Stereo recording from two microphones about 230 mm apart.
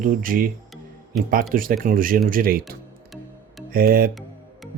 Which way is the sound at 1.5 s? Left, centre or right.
Right.